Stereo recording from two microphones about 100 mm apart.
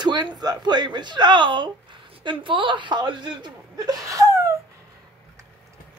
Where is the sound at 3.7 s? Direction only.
35° right (ahead or behind).